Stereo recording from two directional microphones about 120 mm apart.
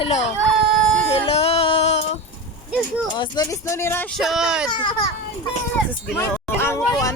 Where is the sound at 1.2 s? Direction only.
50° left (ahead or behind).